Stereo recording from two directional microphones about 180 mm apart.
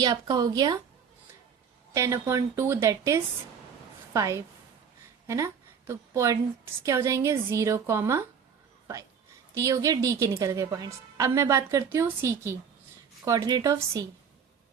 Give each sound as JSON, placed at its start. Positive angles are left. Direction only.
{"t": 0.0, "sound": "speech", "side_deg": -20}
{"t": 1.9, "sound": "a woman's voice", "side_deg": -15}
{"t": 9.6, "sound": "a woman's voice", "side_deg": -15}